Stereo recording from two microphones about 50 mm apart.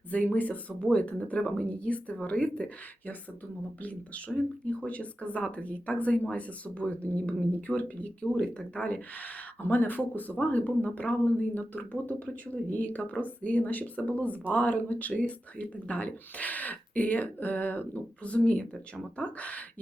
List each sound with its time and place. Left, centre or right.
0.1 s speech: left
4.4 s speech: left
9.6 s speech: left